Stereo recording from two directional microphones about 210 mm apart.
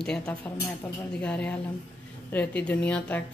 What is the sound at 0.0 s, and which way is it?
A woman's voice, 5° left (ahead or behind).